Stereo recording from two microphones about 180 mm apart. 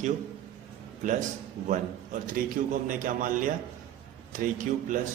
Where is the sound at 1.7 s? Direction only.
45° right (ahead or behind).